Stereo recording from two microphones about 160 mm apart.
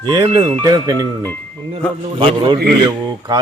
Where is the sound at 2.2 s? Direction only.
30° right (ahead or behind).